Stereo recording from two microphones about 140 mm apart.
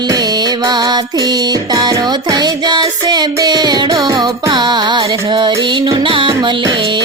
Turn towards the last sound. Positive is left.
turn(degrees=-35)  # may be behind; listen again after turning